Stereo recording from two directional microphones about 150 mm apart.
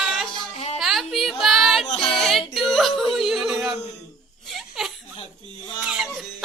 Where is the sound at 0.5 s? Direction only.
45° left (ahead or behind).